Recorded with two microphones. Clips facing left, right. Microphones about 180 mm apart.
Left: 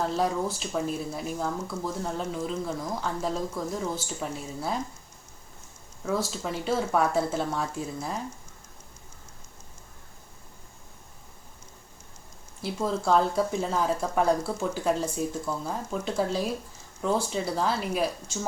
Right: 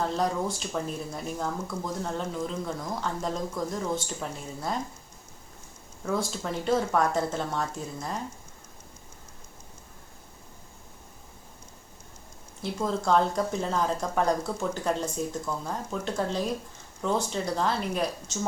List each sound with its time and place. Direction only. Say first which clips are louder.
0.0 s speech: left 1 dB; 5° left (ahead or behind)
6.1 s speech: left 1 dB; 5° left (ahead or behind)
12.6 s speech: left 1 dB; 5° left (ahead or behind)